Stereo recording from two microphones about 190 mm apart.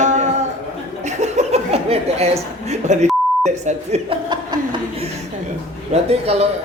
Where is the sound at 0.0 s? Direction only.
40° right (ahead or behind).